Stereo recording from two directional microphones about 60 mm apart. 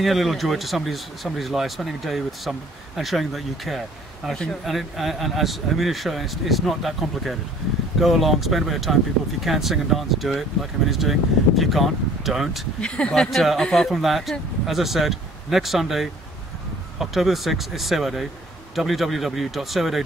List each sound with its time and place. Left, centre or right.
0.0 s speech: centre
12.8 s speech: centre
13.3 s speech: centre
13.8 s speech: centre